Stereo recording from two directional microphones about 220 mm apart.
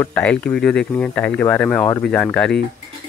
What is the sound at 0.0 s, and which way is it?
Speech, 5° left (ahead or behind).